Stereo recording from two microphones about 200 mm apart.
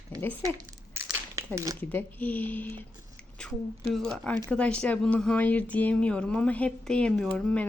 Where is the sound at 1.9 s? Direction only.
10° left (ahead or behind).